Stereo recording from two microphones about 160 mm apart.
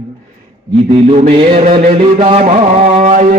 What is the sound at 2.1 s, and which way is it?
Music, 35° right (ahead or behind).